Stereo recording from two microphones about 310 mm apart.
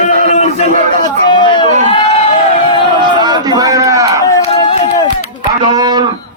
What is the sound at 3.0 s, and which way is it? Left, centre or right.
A man's voice, centre.